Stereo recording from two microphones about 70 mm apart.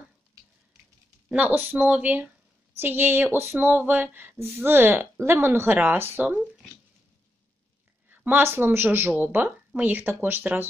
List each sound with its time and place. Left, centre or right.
1.3 s speech: right
8.1 s speech: right